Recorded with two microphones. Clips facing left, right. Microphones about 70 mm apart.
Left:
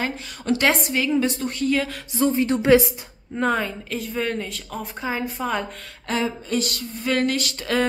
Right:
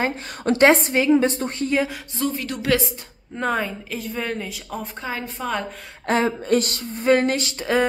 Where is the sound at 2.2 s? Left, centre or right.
Left.